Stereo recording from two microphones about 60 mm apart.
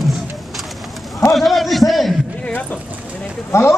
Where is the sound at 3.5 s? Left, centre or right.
Left.